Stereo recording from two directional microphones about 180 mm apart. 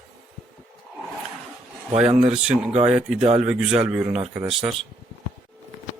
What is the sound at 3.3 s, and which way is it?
Speech, 35° right (ahead or behind).